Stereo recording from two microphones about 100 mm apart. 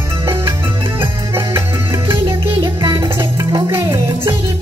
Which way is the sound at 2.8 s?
40° right (ahead or behind).